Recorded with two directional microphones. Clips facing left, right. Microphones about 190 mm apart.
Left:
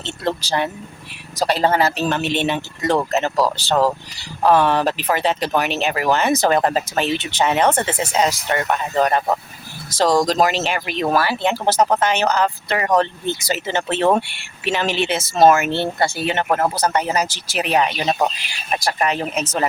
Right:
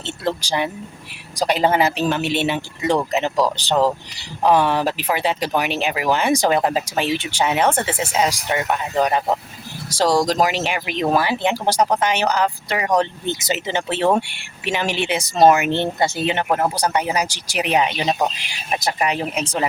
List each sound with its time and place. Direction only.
0.0 s speech: 10° right (ahead or behind)